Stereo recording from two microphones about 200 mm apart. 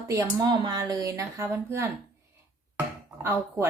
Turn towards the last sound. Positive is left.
turn(degrees=-10)  # may be behind; listen again after turning